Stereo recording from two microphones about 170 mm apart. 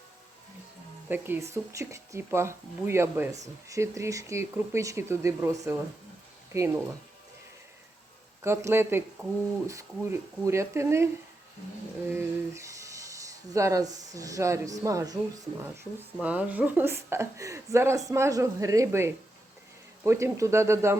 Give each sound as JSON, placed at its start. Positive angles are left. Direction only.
{"t": 1.0, "sound": "a woman's voice", "side_deg": -10}
{"t": 8.4, "sound": "a woman's voice", "side_deg": -15}
{"t": 16.2, "sound": "a woman's voice", "side_deg": -10}